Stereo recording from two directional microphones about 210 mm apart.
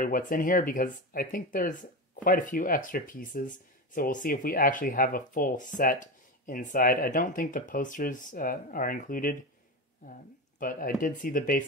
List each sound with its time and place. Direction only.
0.0 s speech: 40° left (ahead or behind)
10.6 s speech: 40° left (ahead or behind)